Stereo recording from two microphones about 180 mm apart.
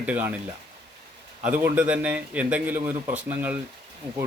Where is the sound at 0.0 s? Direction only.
10° right (ahead or behind).